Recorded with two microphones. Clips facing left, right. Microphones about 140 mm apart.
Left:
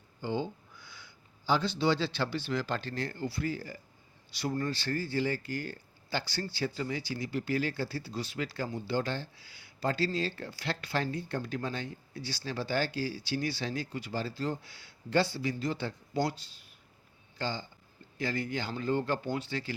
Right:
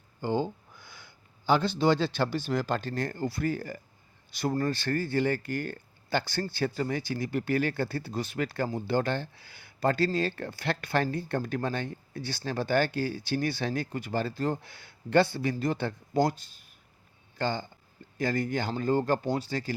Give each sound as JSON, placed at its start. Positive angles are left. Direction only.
{"t": 0.2, "sound": "speech", "side_deg": -50}